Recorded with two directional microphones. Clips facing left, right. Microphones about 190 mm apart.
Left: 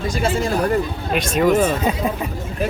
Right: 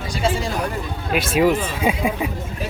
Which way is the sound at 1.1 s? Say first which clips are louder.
Left 1 dB; 5° right (ahead or behind).